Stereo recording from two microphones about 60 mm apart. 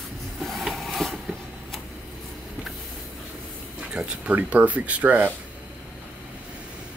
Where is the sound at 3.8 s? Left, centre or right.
Right.